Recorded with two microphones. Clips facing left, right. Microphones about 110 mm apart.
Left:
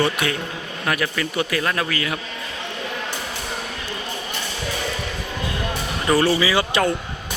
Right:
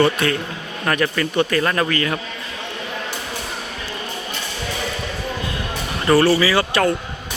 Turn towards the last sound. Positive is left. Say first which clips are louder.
# right 2 dB
turn(degrees=15)  # may be behind; listen again after turning